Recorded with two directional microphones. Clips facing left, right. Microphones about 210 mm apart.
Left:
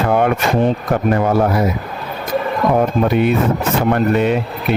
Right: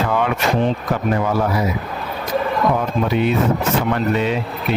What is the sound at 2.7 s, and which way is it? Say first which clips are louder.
Speech: left 5 dB; 55° left (ahead or behind).